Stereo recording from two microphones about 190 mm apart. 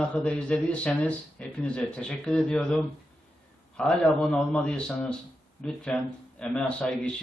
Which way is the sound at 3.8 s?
5° left (ahead or behind).